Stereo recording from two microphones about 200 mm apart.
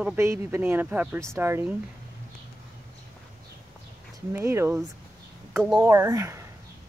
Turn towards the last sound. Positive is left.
turn(degrees=-15)  # may be behind; listen again after turning